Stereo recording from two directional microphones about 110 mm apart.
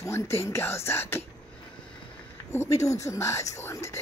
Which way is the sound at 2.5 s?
30° left (ahead or behind).